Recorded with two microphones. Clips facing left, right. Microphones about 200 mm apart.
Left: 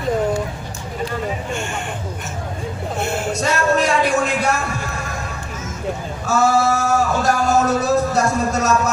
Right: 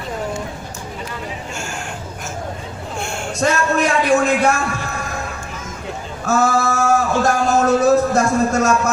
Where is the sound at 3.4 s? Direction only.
50° right (ahead or behind).